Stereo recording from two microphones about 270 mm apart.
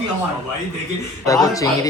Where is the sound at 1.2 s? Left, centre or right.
Centre.